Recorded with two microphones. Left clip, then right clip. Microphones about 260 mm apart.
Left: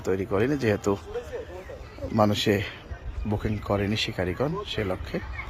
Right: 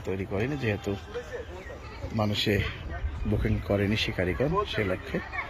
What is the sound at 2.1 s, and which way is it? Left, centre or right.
A man's voice, centre.